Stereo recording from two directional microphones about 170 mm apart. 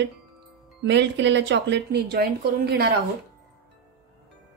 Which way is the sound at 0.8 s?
90° right.